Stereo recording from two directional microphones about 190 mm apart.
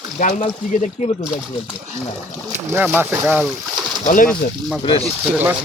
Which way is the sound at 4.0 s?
45° left (ahead or behind).